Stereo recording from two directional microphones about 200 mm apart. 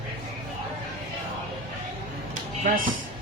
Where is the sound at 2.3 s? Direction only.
45° right (ahead or behind).